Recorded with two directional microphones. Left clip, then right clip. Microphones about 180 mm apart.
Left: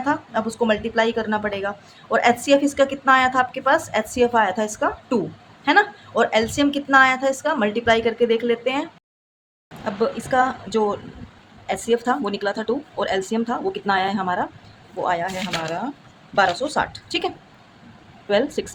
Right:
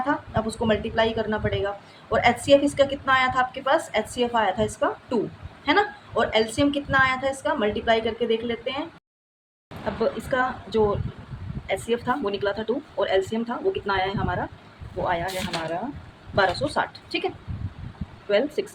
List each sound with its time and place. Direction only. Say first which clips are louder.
0.0 s speech: left 3 dB; 35° left (ahead or behind)
9.8 s speech: left 2 dB; 25° left (ahead or behind)